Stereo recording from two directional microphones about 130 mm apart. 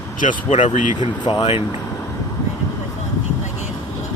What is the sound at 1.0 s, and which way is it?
Speech, 35° left (ahead or behind).